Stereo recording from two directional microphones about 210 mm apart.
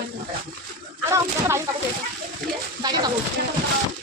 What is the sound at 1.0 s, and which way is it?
Speech, 10° right (ahead or behind).